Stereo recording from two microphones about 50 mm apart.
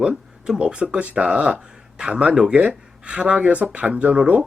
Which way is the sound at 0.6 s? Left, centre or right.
Right.